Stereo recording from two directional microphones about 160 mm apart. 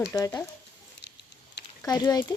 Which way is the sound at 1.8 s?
25° left (ahead or behind).